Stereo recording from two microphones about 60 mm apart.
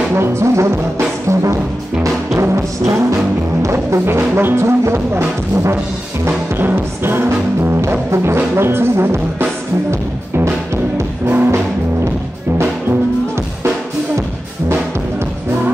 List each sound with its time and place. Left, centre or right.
0.1 s brass instrument: right
2.3 s music: right
3.6 s brass instrument: right
6.2 s music: right
8.5 s brass instrument: right
9.8 s music: right
11.2 s music: right